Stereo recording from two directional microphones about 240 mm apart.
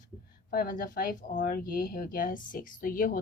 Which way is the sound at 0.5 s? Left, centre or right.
Left.